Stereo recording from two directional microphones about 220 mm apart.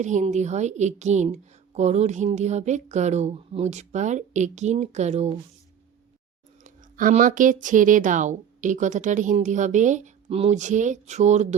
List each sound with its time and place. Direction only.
0.0 s a woman's voice: 35° right (ahead or behind)
6.7 s a woman's voice: 35° right (ahead or behind)